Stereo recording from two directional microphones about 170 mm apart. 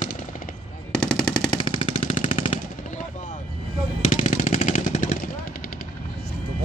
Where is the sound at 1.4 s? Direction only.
35° left (ahead or behind).